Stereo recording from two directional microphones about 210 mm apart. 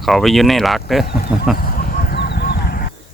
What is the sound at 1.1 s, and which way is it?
Speech, 45° left (ahead or behind).